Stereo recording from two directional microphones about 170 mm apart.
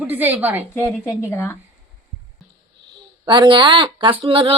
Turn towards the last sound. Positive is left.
turn(degrees=-30)  # may be behind; listen again after turning